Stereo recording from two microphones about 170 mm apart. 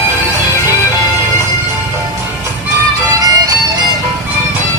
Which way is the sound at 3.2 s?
20° right (ahead or behind).